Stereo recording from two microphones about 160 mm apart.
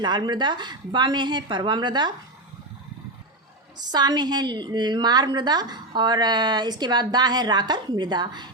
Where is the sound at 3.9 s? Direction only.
25° right (ahead or behind).